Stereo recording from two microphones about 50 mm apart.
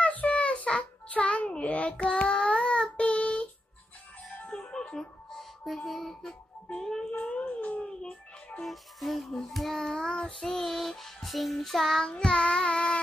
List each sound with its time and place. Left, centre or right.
0.0 s child singing: left
4.5 s music: centre
5.9 s a child's voice: centre
7.1 s a sound: left
7.8 s dog: centre
8.6 s child singing: centre
12.1 s child singing: centre